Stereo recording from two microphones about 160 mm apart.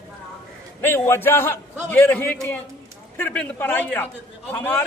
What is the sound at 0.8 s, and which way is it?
A man's voice, 15° left (ahead or behind).